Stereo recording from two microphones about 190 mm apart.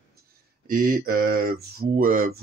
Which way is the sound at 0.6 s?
50° right (ahead or behind).